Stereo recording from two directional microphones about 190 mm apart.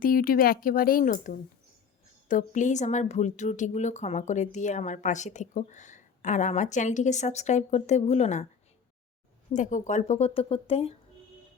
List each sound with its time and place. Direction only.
0.0 s speech: 50° left (ahead or behind)
9.5 s speech: 40° left (ahead or behind)